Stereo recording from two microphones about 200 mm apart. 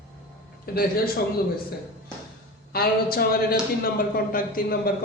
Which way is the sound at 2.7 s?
50° left (ahead or behind).